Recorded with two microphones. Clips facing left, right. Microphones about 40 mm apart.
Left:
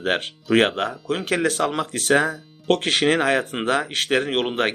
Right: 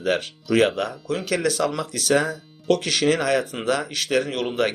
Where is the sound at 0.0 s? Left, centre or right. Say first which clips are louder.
Even; left.